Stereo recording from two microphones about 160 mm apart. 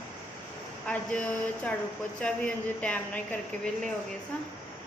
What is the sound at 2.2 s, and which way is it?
A woman's voice, 5° left (ahead or behind).